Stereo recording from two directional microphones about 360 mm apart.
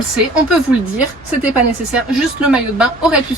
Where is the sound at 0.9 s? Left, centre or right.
Centre.